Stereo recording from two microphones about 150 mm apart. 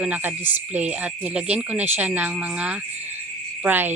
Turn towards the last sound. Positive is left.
turn(degrees=-15)  # may be behind; listen again after turning